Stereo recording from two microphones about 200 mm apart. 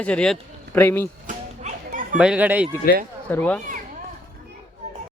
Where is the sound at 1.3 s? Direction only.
40° right (ahead or behind).